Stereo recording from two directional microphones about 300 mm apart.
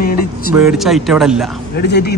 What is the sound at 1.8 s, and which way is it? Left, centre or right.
Speech, left.